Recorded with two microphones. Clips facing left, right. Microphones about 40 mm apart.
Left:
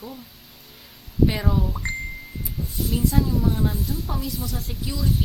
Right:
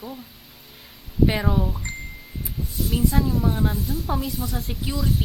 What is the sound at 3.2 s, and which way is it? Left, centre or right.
Speech, centre.